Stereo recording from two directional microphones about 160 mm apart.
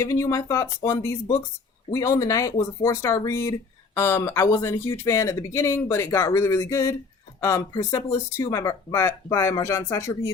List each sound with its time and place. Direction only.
0.0 s speech: 20° left (ahead or behind)